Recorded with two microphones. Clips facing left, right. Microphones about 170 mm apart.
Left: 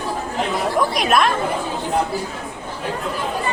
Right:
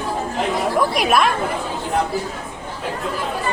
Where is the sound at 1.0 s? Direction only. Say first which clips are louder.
Even; 5° right (ahead or behind).